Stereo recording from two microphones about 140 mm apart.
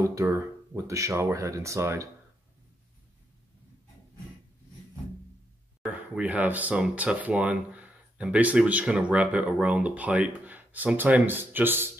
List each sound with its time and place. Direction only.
0.0 s speech: 20° right (ahead or behind)
5.8 s speech: 10° right (ahead or behind)